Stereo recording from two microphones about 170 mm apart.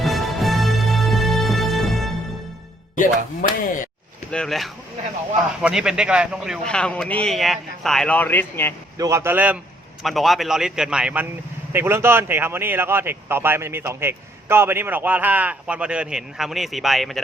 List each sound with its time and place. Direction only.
0.0 s music: centre (ahead or behind)
3.4 s speech: 50° left (ahead or behind)
4.3 s a man's voice: 5° left (ahead or behind)
9.0 s a man's voice: 15° right (ahead or behind); by 17.2 s centre (ahead or behind)